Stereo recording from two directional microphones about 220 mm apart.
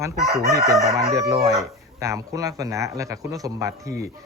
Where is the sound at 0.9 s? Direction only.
15° right (ahead or behind).